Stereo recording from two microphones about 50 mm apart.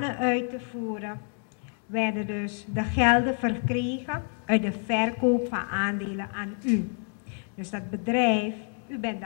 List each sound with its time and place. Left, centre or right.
0.0 s a woman's voice: centre